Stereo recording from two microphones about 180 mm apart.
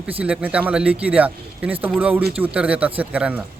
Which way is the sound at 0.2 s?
10° right (ahead or behind).